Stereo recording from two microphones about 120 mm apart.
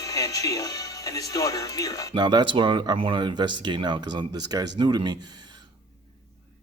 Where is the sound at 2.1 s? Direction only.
40° right (ahead or behind).